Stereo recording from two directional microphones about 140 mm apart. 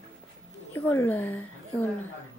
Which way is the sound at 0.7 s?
15° left (ahead or behind).